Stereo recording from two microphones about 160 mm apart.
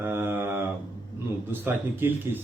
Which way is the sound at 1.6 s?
10° right (ahead or behind).